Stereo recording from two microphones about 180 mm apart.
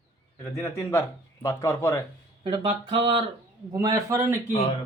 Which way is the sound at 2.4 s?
30° right (ahead or behind).